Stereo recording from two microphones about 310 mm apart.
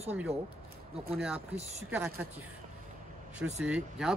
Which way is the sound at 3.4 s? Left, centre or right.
Centre.